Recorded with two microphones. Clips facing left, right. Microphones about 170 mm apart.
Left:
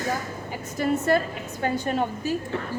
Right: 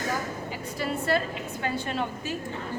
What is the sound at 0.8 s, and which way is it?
A woman's voice, 45° left (ahead or behind).